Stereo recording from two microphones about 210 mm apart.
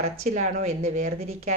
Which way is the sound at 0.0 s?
35° right (ahead or behind).